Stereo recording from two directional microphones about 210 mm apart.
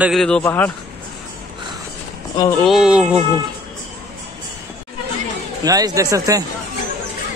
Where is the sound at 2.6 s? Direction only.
5° right (ahead or behind).